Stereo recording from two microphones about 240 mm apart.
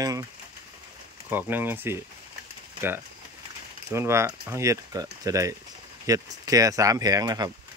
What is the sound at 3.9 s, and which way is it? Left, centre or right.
Speech, centre.